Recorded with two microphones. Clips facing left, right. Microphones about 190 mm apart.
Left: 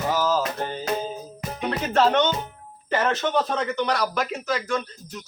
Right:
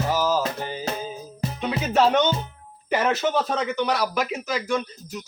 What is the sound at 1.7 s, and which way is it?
Music, 5° right (ahead or behind).